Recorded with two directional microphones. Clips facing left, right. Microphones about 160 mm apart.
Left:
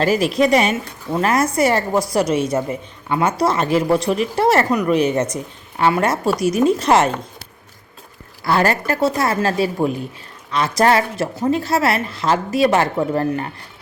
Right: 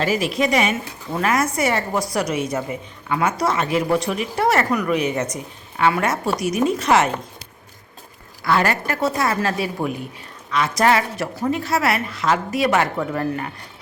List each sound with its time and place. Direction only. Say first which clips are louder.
0.0 s a woman's voice: left 4 dB; 40° left (ahead or behind)
8.4 s a woman's voice: left 2 dB; 30° left (ahead or behind)